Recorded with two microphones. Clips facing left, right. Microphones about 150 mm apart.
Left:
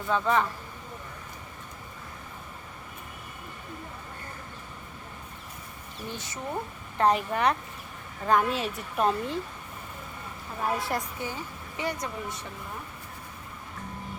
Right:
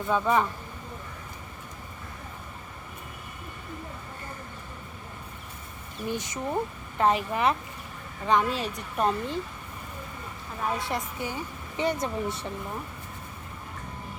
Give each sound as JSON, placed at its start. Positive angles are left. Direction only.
{"t": 0.1, "sound": "speech", "side_deg": -15}
{"t": 6.1, "sound": "speech", "side_deg": -15}
{"t": 7.0, "sound": "a woman's voice", "side_deg": 0}
{"t": 10.6, "sound": "a woman's voice", "side_deg": 0}
{"t": 11.2, "sound": "speech", "side_deg": -15}